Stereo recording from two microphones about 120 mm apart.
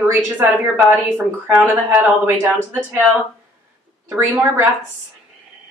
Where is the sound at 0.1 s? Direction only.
15° right (ahead or behind).